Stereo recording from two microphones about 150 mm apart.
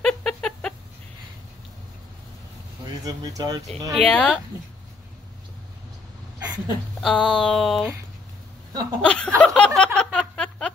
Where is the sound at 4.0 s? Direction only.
5° left (ahead or behind).